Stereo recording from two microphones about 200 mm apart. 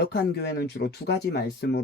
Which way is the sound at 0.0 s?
55° left (ahead or behind).